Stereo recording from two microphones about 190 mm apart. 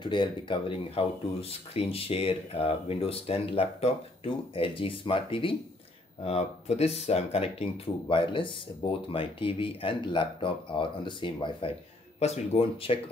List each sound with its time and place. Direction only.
0.0 s speech: 25° left (ahead or behind)